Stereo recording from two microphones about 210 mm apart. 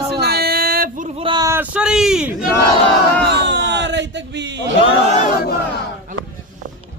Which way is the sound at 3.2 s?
55° right (ahead or behind).